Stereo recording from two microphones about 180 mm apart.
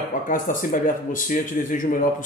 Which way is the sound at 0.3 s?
50° left (ahead or behind).